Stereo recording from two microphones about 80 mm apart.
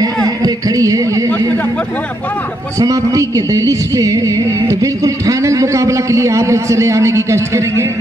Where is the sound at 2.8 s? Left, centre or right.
Right.